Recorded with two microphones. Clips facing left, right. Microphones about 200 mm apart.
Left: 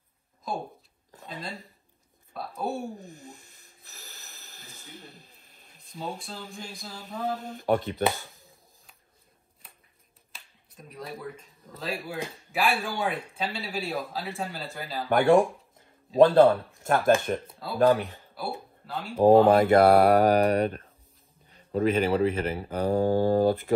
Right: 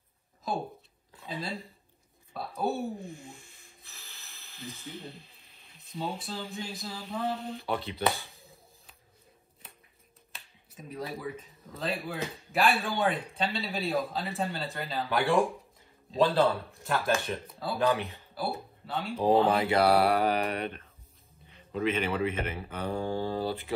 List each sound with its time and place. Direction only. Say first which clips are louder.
1.2 s a sound: right 2 dB; 5° right (ahead or behind)
2.3 s a man's voice: right 1 dB; centre (ahead or behind)
3.0 s a sound: right 2 dB; 40° left (ahead or behind)
5.8 s a man's voice: right 1 dB; centre (ahead or behind)
7.3 s speech: left 7 dB; 45° left (ahead or behind)
9.6 s a sound: right 2 dB; centre (ahead or behind)
10.3 s a man's voice: right 1 dB; 5° right (ahead or behind)
15.0 s speech: left 7 dB; 50° left (ahead or behind)
17.6 s a man's voice: left 5 dB; centre (ahead or behind)
19.1 s speech: left 7 dB; 50° left (ahead or behind)